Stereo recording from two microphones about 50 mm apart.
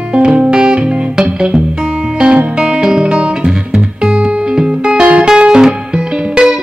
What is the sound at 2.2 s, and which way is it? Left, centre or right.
Music, right.